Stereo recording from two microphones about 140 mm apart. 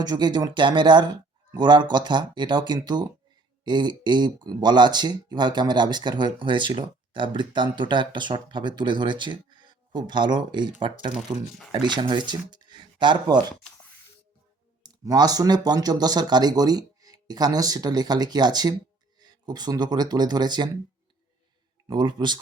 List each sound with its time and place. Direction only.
0.0 s speech: 30° right (ahead or behind)
14.8 s speech: 25° right (ahead or behind)
21.8 s speech: 30° right (ahead or behind)